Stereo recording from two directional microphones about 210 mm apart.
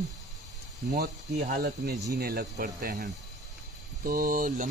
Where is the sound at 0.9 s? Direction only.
45° right (ahead or behind).